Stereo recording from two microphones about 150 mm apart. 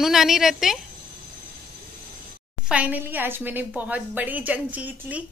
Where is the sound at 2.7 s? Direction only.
10° right (ahead or behind).